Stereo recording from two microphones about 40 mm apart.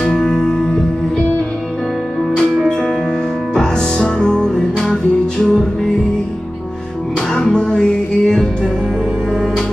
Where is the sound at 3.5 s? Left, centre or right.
Centre.